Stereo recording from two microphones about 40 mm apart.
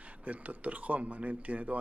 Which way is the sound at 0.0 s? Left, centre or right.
Right.